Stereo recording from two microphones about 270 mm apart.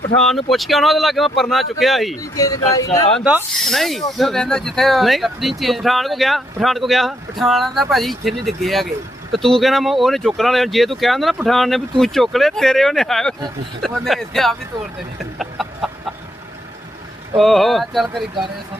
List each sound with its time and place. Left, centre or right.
0.2 s speech: centre
2.3 s speech: centre
3.2 s speech: centre
15.4 s chicken: centre
17.3 s speech: centre